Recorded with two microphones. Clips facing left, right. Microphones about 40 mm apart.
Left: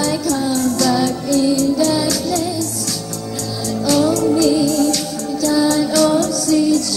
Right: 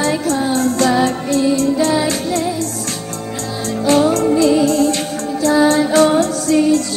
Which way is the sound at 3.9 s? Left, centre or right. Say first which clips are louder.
Right 2 dB; right.